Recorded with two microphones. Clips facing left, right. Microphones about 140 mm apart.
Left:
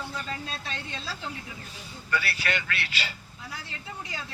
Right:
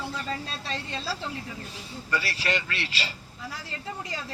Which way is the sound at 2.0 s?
35° right (ahead or behind).